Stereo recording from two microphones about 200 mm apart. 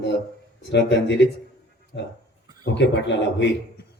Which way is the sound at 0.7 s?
60° left (ahead or behind).